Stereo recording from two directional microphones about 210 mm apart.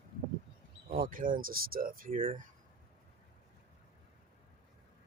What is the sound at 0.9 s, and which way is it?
Speech, 40° right (ahead or behind).